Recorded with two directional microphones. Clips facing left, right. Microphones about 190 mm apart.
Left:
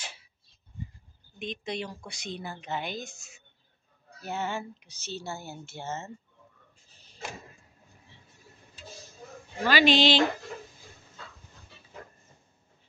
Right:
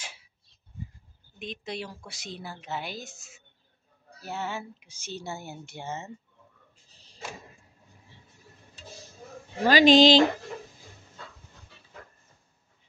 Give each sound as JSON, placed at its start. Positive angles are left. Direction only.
{"t": 0.0, "sound": "a sound", "side_deg": -10}
{"t": 1.4, "sound": "a woman's voice", "side_deg": -5}
{"t": 9.6, "sound": "speech", "side_deg": -40}